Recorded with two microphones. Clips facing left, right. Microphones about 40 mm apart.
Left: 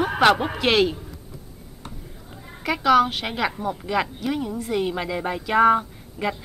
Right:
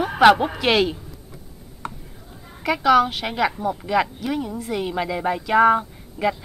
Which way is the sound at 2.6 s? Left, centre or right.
Centre.